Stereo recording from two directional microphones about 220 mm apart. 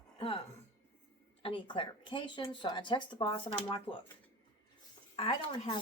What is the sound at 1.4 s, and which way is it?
A woman's voice, 25° left (ahead or behind).